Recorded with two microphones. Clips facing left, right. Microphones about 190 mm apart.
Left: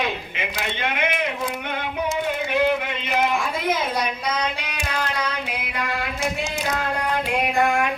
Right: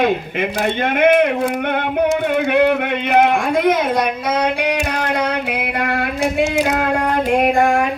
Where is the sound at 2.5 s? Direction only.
60° right (ahead or behind).